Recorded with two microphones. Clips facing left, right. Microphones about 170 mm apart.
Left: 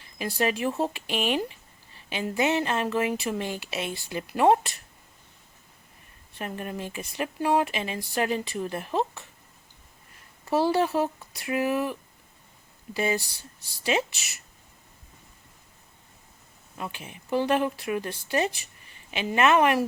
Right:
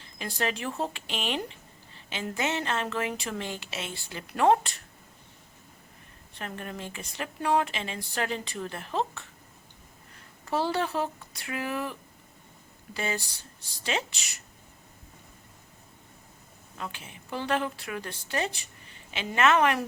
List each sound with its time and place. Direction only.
0.2 s a woman's voice: 10° left (ahead or behind)
6.4 s a woman's voice: 15° left (ahead or behind)
10.5 s a woman's voice: 10° left (ahead or behind)
16.7 s a woman's voice: 15° left (ahead or behind)